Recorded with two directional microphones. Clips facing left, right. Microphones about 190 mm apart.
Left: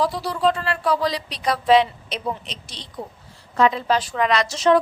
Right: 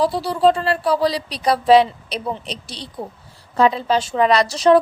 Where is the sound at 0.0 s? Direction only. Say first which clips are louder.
Right 5 dB; 30° right (ahead or behind).